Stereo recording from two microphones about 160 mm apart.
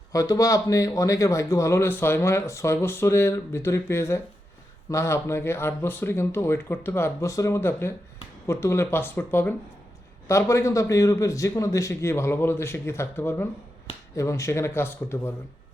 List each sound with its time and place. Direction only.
0.1 s a man's voice: 20° left (ahead or behind)